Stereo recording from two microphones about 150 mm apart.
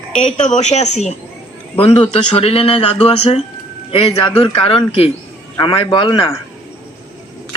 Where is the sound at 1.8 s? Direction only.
40° left (ahead or behind).